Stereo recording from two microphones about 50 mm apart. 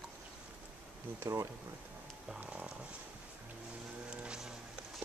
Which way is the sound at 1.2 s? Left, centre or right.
Right.